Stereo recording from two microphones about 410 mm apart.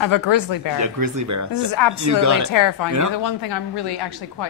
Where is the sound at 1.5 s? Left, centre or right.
Left.